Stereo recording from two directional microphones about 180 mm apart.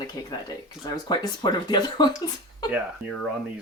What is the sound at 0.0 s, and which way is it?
Speech, 20° left (ahead or behind).